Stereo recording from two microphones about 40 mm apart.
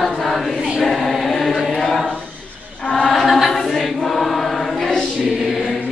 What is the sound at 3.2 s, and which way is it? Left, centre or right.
Choir, centre.